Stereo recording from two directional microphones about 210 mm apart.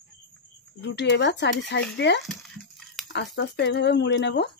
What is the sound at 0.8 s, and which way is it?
Speech, 55° left (ahead or behind).